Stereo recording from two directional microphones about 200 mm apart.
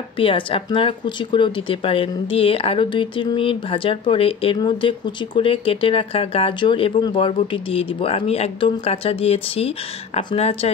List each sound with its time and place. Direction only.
0.2 s speech: 25° left (ahead or behind)